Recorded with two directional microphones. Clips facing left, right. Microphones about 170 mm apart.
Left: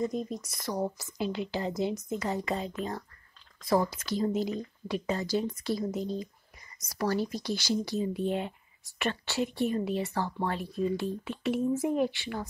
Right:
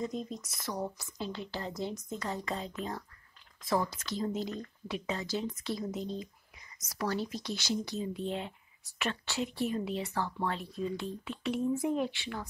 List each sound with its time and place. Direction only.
0.4 s speech: centre (ahead or behind)
0.9 s a woman's voice: 10° left (ahead or behind)